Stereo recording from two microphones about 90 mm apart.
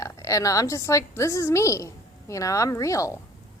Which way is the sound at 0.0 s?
35° left (ahead or behind).